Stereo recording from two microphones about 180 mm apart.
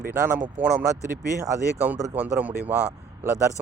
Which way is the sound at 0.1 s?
10° right (ahead or behind).